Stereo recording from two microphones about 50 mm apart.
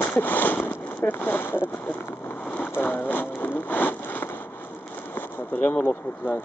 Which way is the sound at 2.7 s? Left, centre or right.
Left.